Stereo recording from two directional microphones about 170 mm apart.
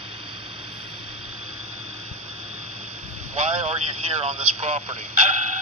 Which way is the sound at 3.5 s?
35° right (ahead or behind).